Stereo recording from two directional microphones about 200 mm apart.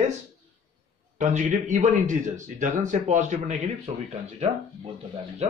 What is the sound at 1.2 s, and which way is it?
A man's voice, 35° right (ahead or behind).